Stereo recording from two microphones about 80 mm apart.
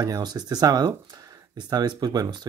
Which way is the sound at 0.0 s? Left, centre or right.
Right.